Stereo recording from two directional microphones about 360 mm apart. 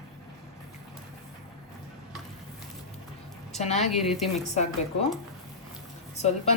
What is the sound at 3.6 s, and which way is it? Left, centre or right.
Speech, centre.